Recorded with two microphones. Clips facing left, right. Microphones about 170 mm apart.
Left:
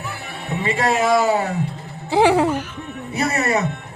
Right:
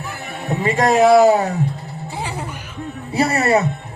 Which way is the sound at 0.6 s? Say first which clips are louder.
Right 5 dB; 40° right (ahead or behind).